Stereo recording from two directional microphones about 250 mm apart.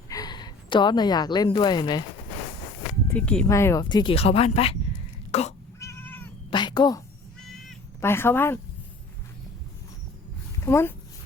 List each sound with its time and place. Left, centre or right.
0.1 s a woman's voice: centre
3.1 s speech: centre; by 4.8 s left
5.3 s cat: left
5.8 s cat: centre
6.5 s a woman's voice: centre
7.7 s cat: centre
10.7 s speech: centre